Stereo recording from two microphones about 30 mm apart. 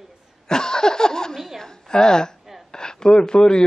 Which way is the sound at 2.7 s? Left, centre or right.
Left.